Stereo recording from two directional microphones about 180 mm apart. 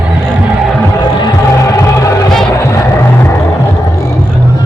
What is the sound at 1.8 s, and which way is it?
Music, 15° left (ahead or behind).